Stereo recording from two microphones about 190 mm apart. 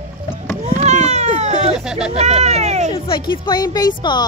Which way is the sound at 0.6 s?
35° right (ahead or behind).